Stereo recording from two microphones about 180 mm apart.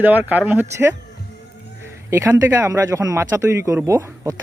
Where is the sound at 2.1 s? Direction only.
15° right (ahead or behind).